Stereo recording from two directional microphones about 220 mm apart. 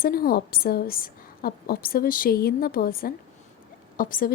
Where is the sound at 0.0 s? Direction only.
40° left (ahead or behind).